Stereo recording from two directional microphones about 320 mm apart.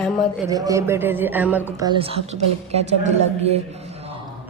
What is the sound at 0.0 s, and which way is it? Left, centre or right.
A woman's voice, centre.